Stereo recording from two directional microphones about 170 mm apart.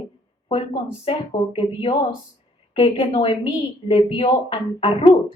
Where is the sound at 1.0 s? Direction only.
35° left (ahead or behind).